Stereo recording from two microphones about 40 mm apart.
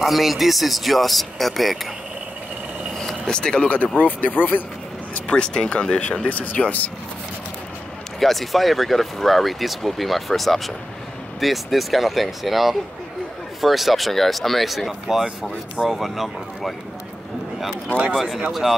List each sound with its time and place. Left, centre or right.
0.0 s speech: centre
3.0 s vehicle: centre
3.6 s speech: left
5.3 s speech: left
6.2 s speech: left
8.2 s speech: centre
18.1 s speech: centre